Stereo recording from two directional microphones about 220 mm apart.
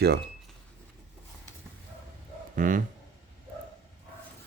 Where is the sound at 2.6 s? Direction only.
35° right (ahead or behind).